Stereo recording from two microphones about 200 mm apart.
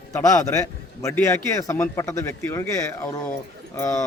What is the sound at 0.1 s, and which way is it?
A man's voice, 15° left (ahead or behind).